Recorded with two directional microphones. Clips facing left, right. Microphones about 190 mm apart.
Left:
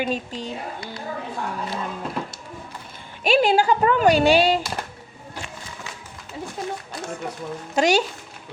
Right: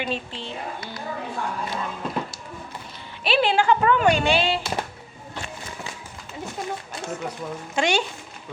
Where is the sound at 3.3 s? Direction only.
45° left (ahead or behind).